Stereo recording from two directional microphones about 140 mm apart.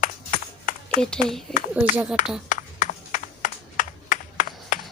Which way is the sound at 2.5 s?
65° left (ahead or behind).